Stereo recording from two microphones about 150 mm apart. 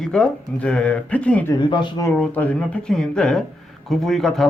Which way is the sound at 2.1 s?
10° left (ahead or behind).